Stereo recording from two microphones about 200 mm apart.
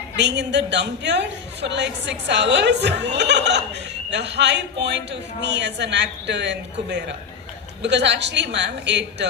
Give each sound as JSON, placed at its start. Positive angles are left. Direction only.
{"t": 0.2, "sound": "a woman's voice", "side_deg": -60}